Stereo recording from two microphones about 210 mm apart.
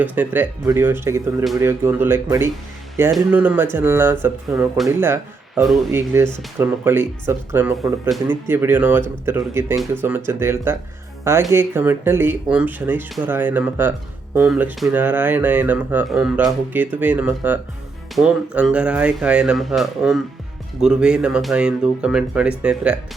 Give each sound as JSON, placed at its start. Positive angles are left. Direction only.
{"t": 0.0, "sound": "speech", "side_deg": -10}